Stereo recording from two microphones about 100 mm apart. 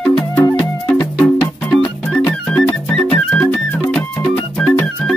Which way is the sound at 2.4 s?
5° left (ahead or behind).